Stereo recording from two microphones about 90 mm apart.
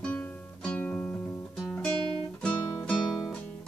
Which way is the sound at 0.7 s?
20° left (ahead or behind).